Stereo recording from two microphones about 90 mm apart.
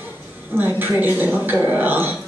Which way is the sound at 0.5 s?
20° right (ahead or behind).